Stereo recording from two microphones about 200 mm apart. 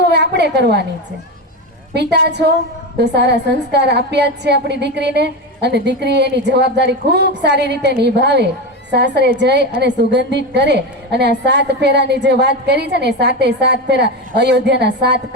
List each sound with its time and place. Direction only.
0.1 s a woman's voice: 60° right (ahead or behind)
1.9 s a woman's voice: 55° right (ahead or behind)